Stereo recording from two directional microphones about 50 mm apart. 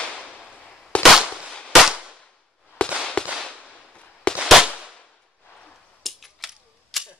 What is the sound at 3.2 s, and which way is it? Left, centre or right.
Whip, left.